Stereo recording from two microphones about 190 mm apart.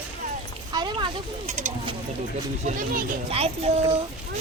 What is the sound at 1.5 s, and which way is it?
A child's voice, 40° right (ahead or behind).